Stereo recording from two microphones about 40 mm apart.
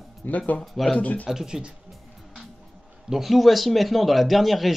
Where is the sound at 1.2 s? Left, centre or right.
Centre.